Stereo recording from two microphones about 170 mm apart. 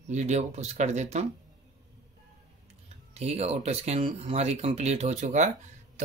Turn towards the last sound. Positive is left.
turn(degrees=-45)  # may be behind; listen again after turning